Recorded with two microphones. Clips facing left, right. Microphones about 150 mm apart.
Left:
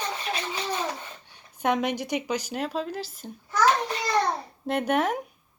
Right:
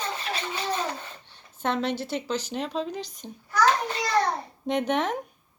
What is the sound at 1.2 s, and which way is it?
A woman's voice, 10° left (ahead or behind).